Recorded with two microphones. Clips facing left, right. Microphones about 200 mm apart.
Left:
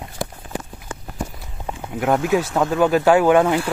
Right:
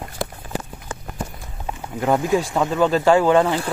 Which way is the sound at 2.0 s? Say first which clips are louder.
Even; 5° left (ahead or behind).